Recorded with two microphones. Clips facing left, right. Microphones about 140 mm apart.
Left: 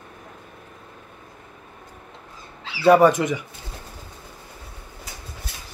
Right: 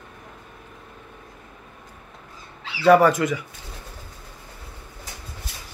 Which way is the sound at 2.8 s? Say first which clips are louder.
Left 1 dB; 20° left (ahead or behind).